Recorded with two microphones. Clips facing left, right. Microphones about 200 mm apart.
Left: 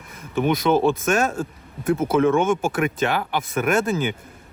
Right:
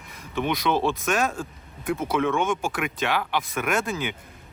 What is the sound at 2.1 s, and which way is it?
Speech, 45° left (ahead or behind).